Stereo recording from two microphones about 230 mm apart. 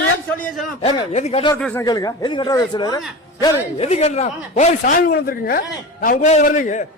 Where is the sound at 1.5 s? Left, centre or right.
Centre.